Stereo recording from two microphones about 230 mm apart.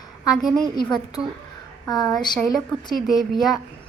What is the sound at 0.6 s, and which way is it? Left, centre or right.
Speech, centre.